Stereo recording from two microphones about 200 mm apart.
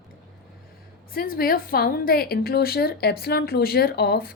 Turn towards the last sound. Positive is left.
turn(degrees=50)  # may be behind; listen again after turning